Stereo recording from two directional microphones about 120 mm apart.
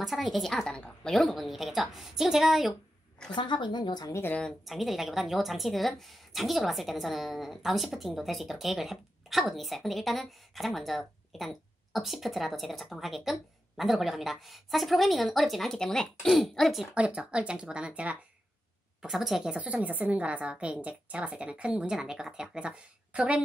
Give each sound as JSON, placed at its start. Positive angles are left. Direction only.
{"t": 0.0, "sound": "speech", "side_deg": 0}
{"t": 3.3, "sound": "a woman's voice", "side_deg": 40}
{"t": 4.1, "sound": "speech", "side_deg": 20}
{"t": 4.4, "sound": "speech", "side_deg": 0}
{"t": 16.9, "sound": "a woman's voice", "side_deg": -10}